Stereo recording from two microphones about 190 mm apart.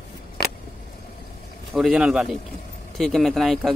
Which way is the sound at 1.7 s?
Centre (ahead or behind).